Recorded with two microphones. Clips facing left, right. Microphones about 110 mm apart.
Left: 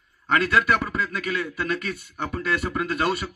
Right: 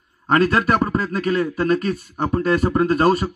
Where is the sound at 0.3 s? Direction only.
40° right (ahead or behind).